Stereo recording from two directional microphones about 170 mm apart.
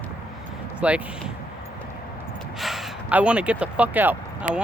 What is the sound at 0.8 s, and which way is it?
Speech, 5° right (ahead or behind).